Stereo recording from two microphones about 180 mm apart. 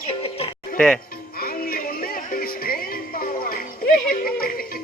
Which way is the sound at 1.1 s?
55° left (ahead or behind).